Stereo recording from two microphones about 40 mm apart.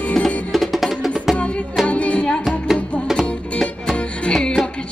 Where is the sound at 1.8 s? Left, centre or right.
Left.